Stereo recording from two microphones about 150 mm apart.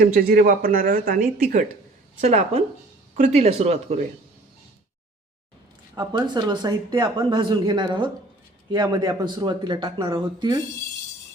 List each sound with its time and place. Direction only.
0.0 s speech: 75° right (ahead or behind)
2.2 s speech: 45° right (ahead or behind)
6.0 s speech: 30° right (ahead or behind)